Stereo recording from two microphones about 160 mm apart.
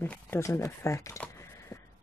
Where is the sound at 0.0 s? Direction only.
15° left (ahead or behind).